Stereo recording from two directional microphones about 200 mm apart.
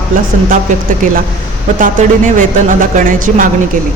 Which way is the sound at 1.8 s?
40° right (ahead or behind).